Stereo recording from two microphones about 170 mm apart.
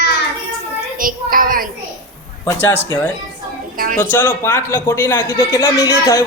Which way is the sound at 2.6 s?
15° left (ahead or behind).